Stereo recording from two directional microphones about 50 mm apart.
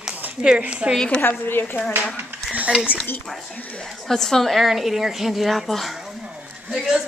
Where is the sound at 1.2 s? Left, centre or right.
Left.